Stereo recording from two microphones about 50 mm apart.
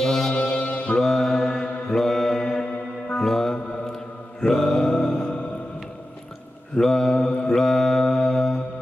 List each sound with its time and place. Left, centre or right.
0.0 s brass instrument: centre
0.3 s brass instrument: left
0.9 s music: centre
1.5 s mantra: centre
3.1 s music: centre
4.6 s mantra: centre
6.8 s mantra: centre